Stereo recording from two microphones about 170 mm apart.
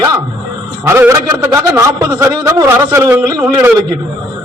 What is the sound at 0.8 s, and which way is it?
A man's voice, 15° right (ahead or behind).